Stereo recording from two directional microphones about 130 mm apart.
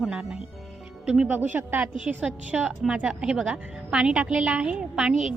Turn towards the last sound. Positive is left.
turn(degrees=-5)  # may be behind; listen again after turning